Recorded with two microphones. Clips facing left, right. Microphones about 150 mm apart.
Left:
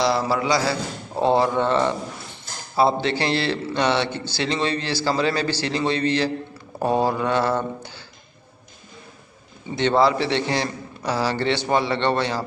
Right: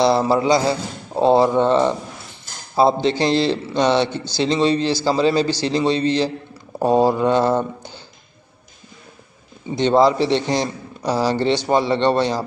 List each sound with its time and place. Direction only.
0.0 s a man's voice: 25° right (ahead or behind)
9.8 s a man's voice: 15° right (ahead or behind)